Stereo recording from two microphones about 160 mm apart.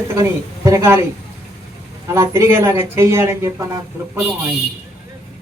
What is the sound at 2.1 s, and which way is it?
Speech, 15° right (ahead or behind).